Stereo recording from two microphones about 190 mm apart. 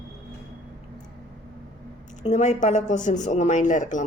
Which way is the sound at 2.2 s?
40° left (ahead or behind).